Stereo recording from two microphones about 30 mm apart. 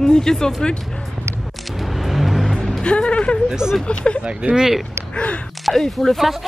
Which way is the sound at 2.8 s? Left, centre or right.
Left.